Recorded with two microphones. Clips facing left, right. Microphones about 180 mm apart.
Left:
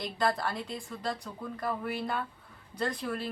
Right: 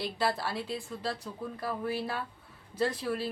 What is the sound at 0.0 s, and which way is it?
Speech, 5° right (ahead or behind).